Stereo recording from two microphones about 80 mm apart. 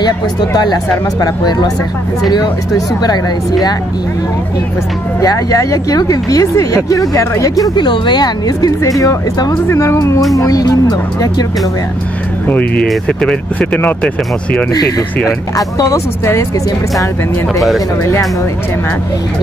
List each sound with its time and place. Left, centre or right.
0.0 s speech: left
5.2 s speech: left
7.7 s speech: left
12.4 s speech: centre
14.7 s speech: left
17.6 s speech: centre